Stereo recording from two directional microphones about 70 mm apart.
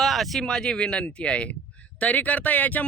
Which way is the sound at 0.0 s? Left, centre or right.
Centre.